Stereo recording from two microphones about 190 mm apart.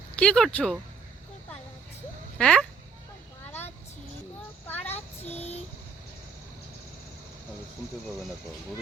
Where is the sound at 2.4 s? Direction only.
5° left (ahead or behind).